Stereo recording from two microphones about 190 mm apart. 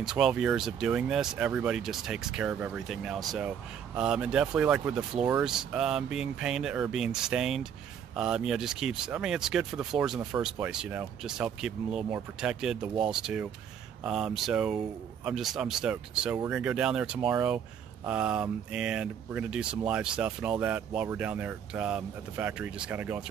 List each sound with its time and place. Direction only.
0.0 s speech: 5° right (ahead or behind)